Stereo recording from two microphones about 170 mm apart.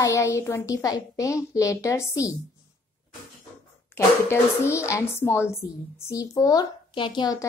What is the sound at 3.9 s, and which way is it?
Speech, 15° left (ahead or behind).